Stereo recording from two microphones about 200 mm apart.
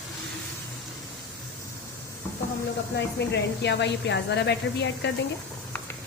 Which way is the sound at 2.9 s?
60° left (ahead or behind).